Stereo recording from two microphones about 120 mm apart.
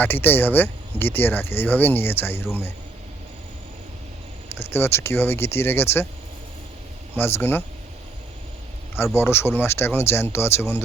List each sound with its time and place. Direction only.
0.0 s speech: 15° left (ahead or behind)
4.5 s speech: 20° left (ahead or behind)
7.2 s speech: 20° left (ahead or behind)
9.1 s speech: 20° left (ahead or behind)